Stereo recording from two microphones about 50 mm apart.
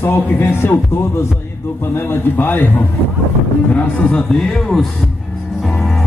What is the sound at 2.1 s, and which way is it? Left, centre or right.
Speech, left.